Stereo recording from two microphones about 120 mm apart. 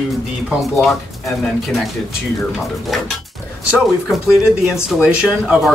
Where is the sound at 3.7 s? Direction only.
Centre (ahead or behind).